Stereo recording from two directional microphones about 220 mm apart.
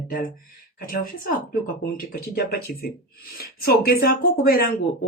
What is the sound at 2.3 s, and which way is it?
A man's voice, 45° left (ahead or behind).